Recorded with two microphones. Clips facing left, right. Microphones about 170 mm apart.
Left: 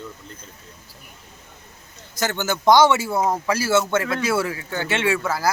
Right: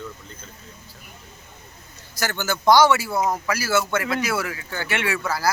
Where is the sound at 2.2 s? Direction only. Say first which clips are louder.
Left 2 dB; 20° left (ahead or behind).